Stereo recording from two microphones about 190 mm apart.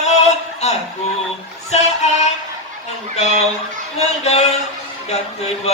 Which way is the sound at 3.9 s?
35° left (ahead or behind).